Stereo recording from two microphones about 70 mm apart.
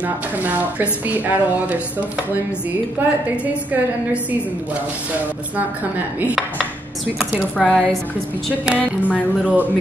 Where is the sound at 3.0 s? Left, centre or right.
Right.